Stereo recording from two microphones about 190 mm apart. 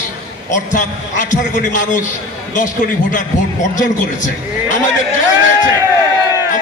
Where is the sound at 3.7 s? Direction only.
40° left (ahead or behind).